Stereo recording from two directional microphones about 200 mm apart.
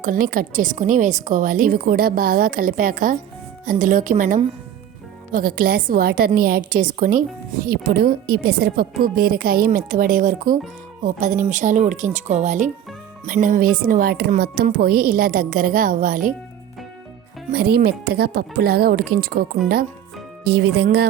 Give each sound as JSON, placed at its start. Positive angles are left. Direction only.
{"t": 0.0, "sound": "a woman's voice", "side_deg": -45}
{"t": 17.5, "sound": "a woman's voice", "side_deg": -50}
{"t": 20.8, "sound": "speech", "side_deg": -55}